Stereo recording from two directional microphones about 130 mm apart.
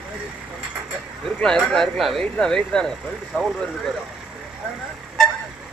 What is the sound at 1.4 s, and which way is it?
Speech, 5° left (ahead or behind).